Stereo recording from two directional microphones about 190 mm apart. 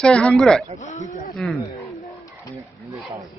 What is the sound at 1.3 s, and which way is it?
Speech, centre (ahead or behind).